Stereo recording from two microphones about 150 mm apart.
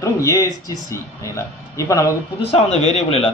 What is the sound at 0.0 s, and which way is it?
A man's voice, 20° left (ahead or behind).